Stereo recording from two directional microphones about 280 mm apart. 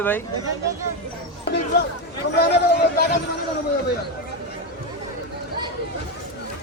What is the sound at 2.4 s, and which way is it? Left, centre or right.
Speech, left.